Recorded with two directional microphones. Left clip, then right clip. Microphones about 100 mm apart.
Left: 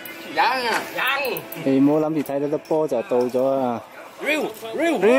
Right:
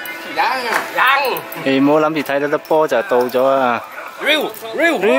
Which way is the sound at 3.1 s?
20° right (ahead or behind).